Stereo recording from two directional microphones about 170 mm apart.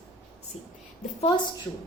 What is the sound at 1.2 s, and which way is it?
Speech, 30° left (ahead or behind).